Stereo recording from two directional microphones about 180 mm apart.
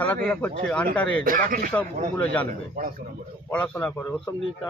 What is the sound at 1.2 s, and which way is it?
Speech, 50° right (ahead or behind).